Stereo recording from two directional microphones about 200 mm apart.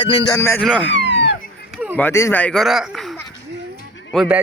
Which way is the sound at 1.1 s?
60° left (ahead or behind).